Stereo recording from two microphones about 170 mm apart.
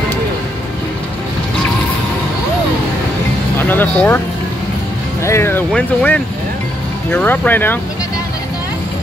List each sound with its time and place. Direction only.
3.5 s music: 10° left (ahead or behind)
5.2 s speech: 15° left (ahead or behind)